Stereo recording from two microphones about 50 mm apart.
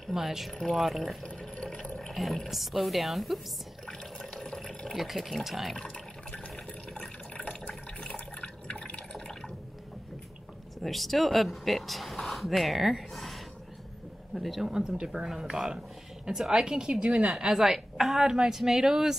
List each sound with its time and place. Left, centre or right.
0.1 s speech: centre
1.2 s water: centre
2.2 s speech: centre
3.8 s water: centre
5.0 s speech: centre
6.5 s water: centre
10.8 s speech: centre
14.7 s a woman's voice: centre